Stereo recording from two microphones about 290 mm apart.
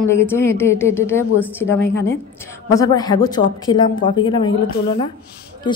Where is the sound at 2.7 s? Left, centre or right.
Centre.